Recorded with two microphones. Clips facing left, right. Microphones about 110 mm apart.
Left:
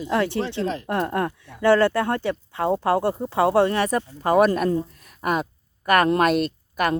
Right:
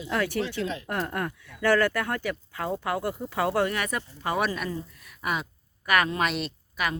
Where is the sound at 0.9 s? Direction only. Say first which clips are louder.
Left 6 dB; 25° left (ahead or behind).